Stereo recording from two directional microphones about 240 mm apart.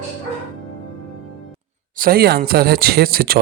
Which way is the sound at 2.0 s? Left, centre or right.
Right.